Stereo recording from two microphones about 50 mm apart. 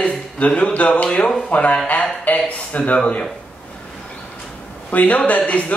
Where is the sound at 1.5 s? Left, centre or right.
Left.